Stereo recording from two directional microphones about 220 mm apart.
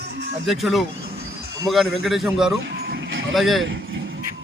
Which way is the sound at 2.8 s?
50° right (ahead or behind).